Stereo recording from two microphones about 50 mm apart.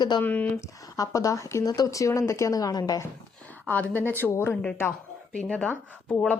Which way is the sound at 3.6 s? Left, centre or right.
Left.